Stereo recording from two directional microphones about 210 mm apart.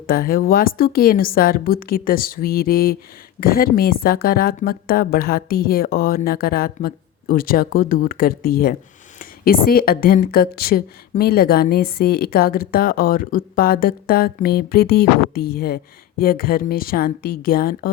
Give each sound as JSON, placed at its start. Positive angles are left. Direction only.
{"t": 0.1, "sound": "speech", "side_deg": 45}